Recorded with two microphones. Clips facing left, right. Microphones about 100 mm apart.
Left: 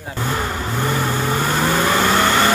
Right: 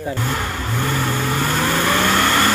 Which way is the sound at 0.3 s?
15° left (ahead or behind).